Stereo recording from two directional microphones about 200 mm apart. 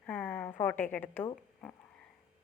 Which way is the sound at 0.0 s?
10° left (ahead or behind).